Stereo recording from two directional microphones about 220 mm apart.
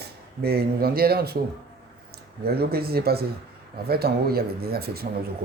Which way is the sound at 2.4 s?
45° right (ahead or behind).